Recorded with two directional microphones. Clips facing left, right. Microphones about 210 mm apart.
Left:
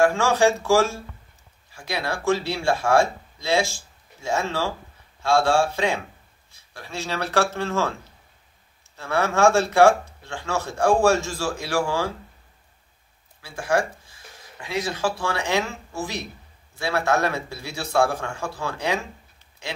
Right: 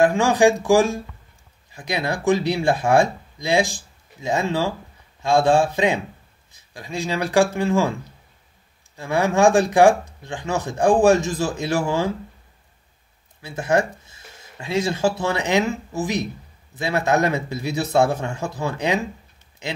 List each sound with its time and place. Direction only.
0.0 s speech: 15° right (ahead or behind)
13.4 s a man's voice: 20° right (ahead or behind)